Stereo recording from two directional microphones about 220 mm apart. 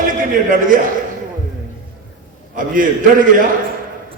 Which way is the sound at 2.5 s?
40° right (ahead or behind).